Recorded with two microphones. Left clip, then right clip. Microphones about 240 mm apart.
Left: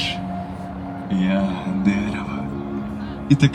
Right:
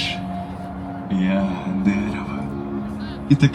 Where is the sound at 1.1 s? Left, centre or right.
Centre.